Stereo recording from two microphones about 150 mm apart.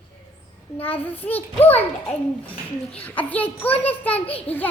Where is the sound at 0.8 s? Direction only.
10° left (ahead or behind).